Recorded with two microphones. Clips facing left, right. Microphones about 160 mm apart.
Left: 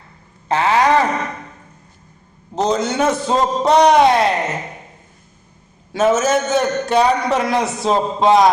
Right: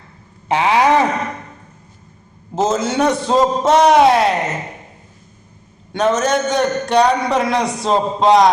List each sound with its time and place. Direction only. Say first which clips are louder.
0.4 s a sound: right 1 dB; 15° right (ahead or behind)
2.6 s a man's voice: right 1 dB; centre (ahead or behind)
5.9 s a man's voice: left 1 dB; 5° left (ahead or behind)